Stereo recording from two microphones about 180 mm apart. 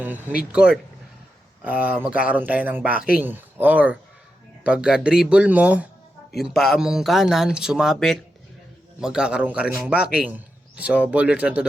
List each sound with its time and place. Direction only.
0.0 s speech: 10° right (ahead or behind)